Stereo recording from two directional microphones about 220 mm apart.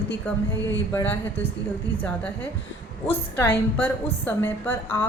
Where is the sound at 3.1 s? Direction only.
10° left (ahead or behind).